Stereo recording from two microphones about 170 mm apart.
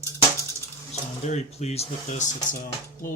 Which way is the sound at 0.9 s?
40° left (ahead or behind).